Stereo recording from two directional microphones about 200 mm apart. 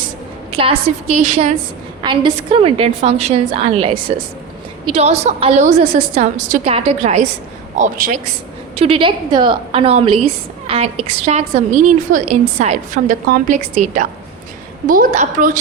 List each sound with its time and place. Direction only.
0.5 s a woman's voice: 30° right (ahead or behind)
2.0 s a woman's voice: 25° right (ahead or behind); by 8.2 s 40° right (ahead or behind)
8.7 s a woman's voice: 30° right (ahead or behind)